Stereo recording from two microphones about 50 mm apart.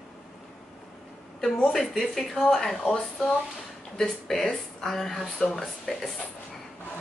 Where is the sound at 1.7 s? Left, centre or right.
Centre.